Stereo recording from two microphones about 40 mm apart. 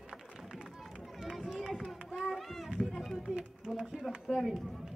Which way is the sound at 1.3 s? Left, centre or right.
Centre.